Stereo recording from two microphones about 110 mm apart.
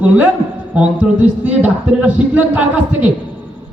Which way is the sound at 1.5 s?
15° right (ahead or behind).